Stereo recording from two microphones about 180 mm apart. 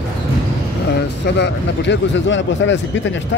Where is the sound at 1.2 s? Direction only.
70° left (ahead or behind); by 2.8 s 90° left.